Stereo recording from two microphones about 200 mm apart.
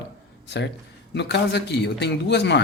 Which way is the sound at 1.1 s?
60° left (ahead or behind).